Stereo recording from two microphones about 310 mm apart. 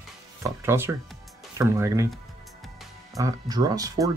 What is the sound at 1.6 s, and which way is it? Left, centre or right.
Speech, centre.